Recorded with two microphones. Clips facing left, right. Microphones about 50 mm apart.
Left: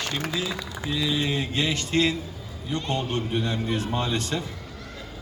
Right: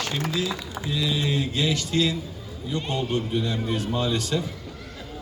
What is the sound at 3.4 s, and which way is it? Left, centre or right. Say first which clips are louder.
Mantra: even; left.